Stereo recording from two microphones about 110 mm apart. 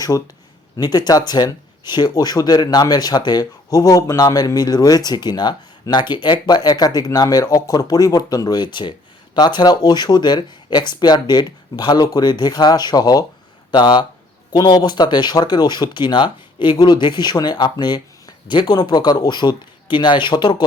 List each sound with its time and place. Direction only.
0.8 s speech: 40° left (ahead or behind)